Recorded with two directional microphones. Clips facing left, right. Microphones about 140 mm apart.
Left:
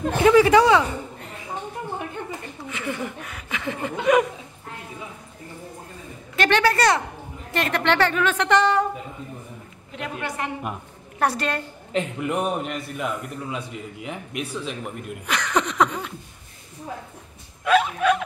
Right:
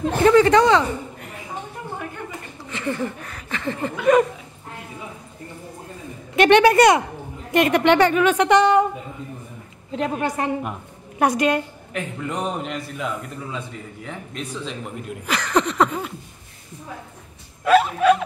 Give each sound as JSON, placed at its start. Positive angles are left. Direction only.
{"t": 0.2, "sound": "speech", "side_deg": 5}
{"t": 2.7, "sound": "a man's voice", "side_deg": 5}
{"t": 6.4, "sound": "a woman's voice", "side_deg": -20}
{"t": 9.9, "sound": "a woman's voice", "side_deg": -35}
{"t": 11.1, "sound": "a woman's voice", "side_deg": -10}
{"t": 11.9, "sound": "a man's voice", "side_deg": 20}
{"t": 12.3, "sound": "a man's voice", "side_deg": 10}
{"t": 17.6, "sound": "a man's voice", "side_deg": -5}